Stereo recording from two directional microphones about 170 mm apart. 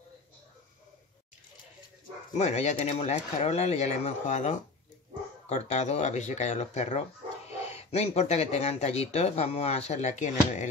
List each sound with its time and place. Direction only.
2.3 s speech: 40° left (ahead or behind)